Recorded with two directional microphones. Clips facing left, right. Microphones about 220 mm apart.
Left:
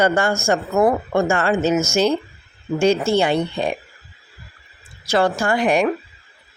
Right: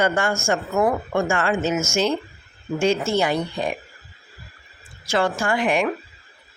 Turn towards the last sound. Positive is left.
turn(degrees=40)  # may be behind; listen again after turning